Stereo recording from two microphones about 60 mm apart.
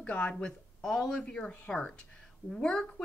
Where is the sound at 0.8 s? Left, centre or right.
Centre.